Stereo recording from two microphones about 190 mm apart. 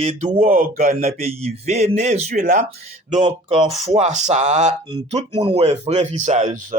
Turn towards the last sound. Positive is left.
turn(degrees=-40)  # may be behind; listen again after turning